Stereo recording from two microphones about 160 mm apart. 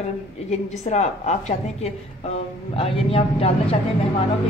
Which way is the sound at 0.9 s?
45° left (ahead or behind).